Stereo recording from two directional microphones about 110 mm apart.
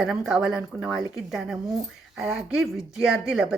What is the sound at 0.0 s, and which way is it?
A woman's voice, 5° right (ahead or behind).